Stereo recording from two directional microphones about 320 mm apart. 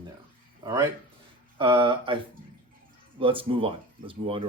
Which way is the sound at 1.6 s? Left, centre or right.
Centre.